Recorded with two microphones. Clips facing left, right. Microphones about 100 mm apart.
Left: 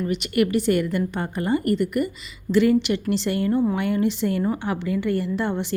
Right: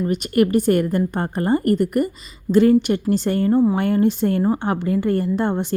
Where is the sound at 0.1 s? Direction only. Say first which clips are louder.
Right 4 dB; 45° right (ahead or behind).